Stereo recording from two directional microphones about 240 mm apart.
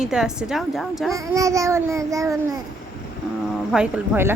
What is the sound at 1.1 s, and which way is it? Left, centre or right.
Babbling, centre.